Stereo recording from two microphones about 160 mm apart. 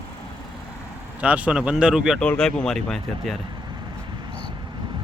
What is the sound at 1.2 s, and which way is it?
Speech, 10° right (ahead or behind).